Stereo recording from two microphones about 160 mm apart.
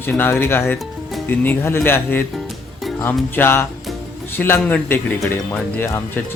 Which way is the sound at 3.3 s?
15° left (ahead or behind).